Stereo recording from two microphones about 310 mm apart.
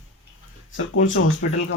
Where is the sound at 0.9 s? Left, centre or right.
Left.